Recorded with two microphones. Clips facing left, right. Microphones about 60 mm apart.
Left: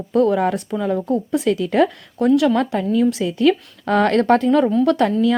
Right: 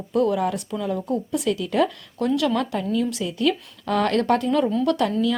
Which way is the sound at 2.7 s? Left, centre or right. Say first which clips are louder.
Left 6 dB; left.